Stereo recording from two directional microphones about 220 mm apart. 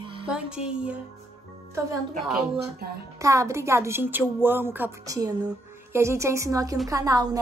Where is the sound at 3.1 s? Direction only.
15° right (ahead or behind).